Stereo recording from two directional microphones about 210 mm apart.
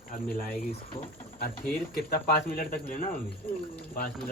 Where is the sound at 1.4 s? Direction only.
45° left (ahead or behind).